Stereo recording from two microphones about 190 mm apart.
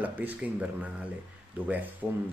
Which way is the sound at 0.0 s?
10° right (ahead or behind).